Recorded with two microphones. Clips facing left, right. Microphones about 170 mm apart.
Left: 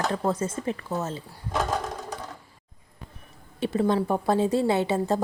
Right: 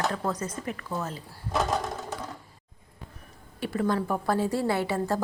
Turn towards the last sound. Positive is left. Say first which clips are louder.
# left 3 dB
turn(degrees=20)  # may be behind; listen again after turning